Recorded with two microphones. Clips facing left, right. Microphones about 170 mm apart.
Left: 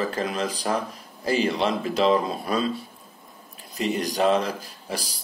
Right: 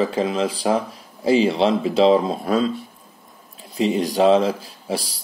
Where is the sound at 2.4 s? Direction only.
90° right.